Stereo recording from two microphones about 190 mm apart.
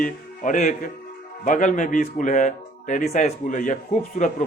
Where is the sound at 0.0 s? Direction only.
45° left (ahead or behind).